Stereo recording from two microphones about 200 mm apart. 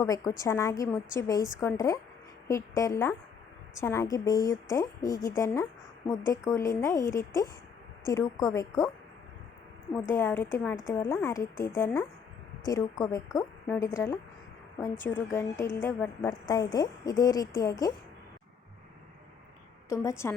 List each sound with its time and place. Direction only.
0.0 s a woman's voice: 15° left (ahead or behind)
9.9 s a woman's voice: 10° left (ahead or behind)
19.9 s a woman's voice: 15° left (ahead or behind)